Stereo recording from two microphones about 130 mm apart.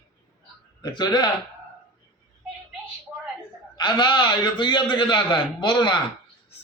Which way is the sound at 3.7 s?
35° left (ahead or behind).